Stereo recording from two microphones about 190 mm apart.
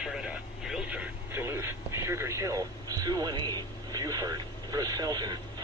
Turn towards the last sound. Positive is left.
turn(degrees=-20)  # may be behind; listen again after turning